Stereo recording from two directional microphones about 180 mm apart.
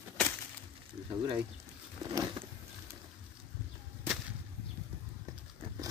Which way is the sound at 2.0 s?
25° right (ahead or behind).